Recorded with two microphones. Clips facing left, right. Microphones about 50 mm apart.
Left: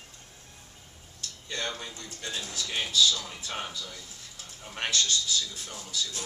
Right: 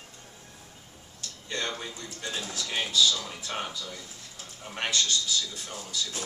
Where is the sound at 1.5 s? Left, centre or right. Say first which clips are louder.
Right 2 dB; centre.